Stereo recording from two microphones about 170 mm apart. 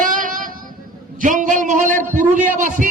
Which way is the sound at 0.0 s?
50° right (ahead or behind).